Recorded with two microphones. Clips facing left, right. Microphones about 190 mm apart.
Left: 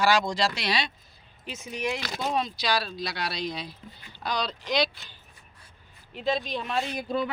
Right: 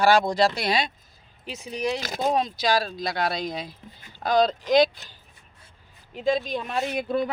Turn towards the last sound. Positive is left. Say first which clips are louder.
# right 3 dB
turn(degrees=-55)  # may be behind; listen again after turning